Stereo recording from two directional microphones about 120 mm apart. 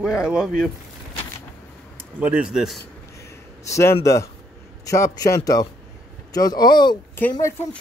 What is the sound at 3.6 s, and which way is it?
Speech, 25° left (ahead or behind).